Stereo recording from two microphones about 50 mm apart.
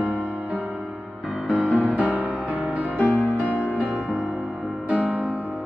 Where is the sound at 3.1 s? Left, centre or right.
Left.